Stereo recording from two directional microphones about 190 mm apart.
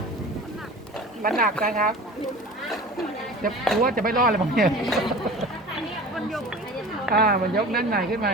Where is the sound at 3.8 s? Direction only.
50° right (ahead or behind).